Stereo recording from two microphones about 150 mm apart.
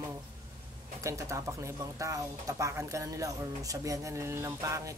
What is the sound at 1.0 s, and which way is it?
Speech, 20° right (ahead or behind).